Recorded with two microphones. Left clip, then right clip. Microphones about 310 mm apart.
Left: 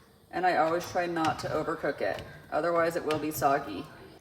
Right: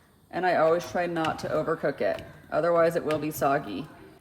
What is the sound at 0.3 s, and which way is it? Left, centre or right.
Speech, right.